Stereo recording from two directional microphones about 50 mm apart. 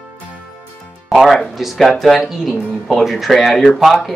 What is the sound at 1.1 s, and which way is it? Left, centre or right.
Speech, centre.